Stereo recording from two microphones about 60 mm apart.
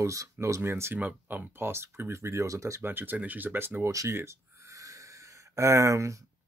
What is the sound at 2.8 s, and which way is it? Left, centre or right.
Speech, right.